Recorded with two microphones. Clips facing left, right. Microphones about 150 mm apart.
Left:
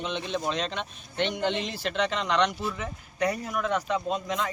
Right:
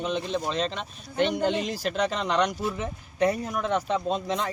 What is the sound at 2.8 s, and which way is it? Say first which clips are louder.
Speech: right 5 dB; 25° right (ahead or behind).